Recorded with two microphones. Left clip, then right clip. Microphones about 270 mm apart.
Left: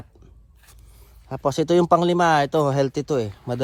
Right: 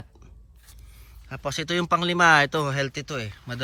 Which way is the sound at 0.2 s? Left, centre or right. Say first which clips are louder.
Left 2 dB; left.